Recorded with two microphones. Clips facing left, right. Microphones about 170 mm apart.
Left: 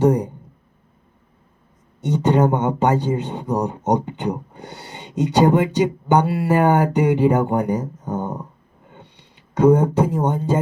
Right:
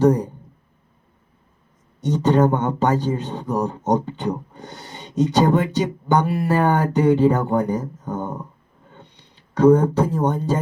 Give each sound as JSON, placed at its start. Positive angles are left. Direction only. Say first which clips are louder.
{"t": 0.0, "sound": "speech", "louder": "even", "side_deg": 15}
{"t": 2.0, "sound": "speech", "louder": "even", "side_deg": 15}
{"t": 8.9, "sound": "a sound", "louder": "left 1 dB", "side_deg": 15}